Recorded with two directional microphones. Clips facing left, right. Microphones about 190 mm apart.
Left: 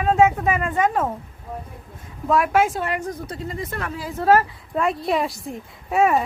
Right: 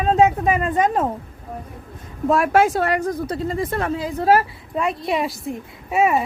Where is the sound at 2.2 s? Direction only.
30° right (ahead or behind); by 4.8 s 10° right (ahead or behind).